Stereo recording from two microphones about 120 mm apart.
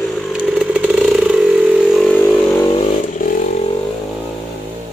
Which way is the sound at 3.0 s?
90° left.